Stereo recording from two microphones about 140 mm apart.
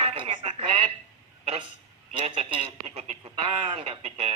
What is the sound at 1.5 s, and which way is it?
Speech, 35° right (ahead or behind).